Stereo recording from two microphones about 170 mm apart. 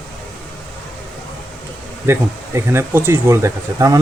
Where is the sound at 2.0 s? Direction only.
15° right (ahead or behind).